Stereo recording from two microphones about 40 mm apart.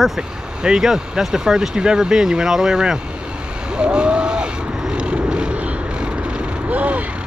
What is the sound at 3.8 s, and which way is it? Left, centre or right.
Vehicle, right.